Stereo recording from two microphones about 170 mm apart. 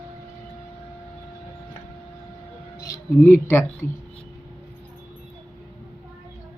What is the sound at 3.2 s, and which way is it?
Speech, 15° left (ahead or behind).